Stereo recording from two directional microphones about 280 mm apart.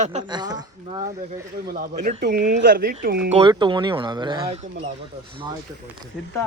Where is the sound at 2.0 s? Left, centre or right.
Right.